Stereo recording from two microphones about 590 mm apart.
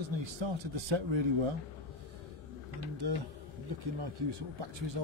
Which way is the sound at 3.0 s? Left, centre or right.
Right.